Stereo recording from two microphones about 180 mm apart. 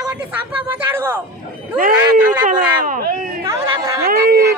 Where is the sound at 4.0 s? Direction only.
55° right (ahead or behind).